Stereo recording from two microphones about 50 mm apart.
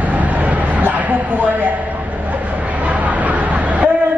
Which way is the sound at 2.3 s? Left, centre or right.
Right.